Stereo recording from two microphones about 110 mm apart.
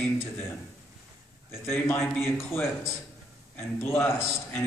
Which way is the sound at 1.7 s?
20° left (ahead or behind).